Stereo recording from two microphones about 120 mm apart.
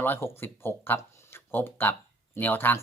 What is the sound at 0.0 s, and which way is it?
Speech, 15° left (ahead or behind).